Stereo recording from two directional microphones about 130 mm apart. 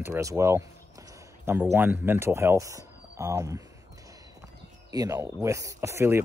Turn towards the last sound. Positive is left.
turn(degrees=-20)  # may be behind; listen again after turning